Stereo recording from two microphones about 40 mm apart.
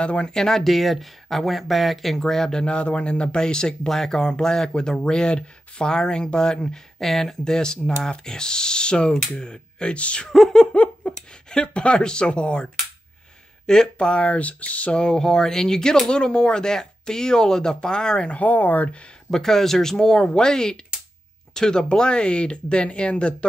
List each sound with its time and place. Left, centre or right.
0.0 s speech: left; by 2.5 s centre
2.5 s speech: left
9.9 s speech: left
10.7 s a sound: left
11.5 s speech: left
13.9 s speech: left
15.0 s speech: centre
18.4 s speech: left
19.3 s speech: centre; by 23.3 s left